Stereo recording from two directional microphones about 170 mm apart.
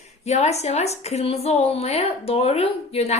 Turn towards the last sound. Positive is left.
turn(degrees=40)  # may be behind; listen again after turning